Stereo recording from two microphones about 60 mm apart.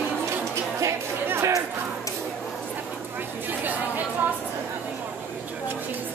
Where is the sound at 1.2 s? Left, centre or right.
Right.